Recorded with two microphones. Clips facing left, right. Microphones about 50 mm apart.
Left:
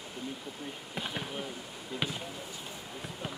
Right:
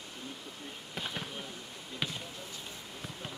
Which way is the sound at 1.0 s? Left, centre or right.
Centre.